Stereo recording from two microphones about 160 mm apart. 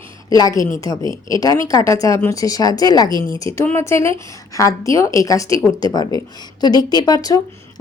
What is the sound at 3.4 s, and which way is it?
A woman's voice, 15° left (ahead or behind).